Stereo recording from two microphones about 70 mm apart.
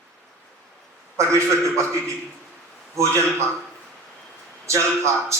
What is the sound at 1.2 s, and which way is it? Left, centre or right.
A man's voice, right.